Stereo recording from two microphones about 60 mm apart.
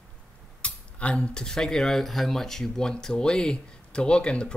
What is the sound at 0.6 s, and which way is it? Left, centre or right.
Speech, left.